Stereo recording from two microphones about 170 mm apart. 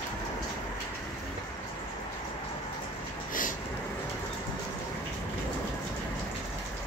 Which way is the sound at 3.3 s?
50° left (ahead or behind).